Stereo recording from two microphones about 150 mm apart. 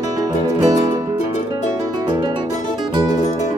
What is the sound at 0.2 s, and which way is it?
Music, 25° right (ahead or behind).